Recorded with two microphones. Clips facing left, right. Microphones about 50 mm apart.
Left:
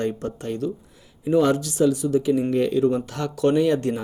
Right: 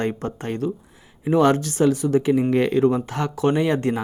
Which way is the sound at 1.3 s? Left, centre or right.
Right.